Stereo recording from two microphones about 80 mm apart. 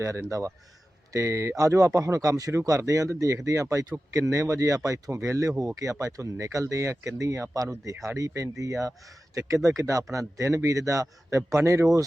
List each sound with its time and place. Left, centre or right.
0.0 s speech: right